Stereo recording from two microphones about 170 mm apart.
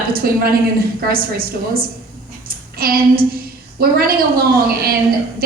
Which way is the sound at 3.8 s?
60° right (ahead or behind).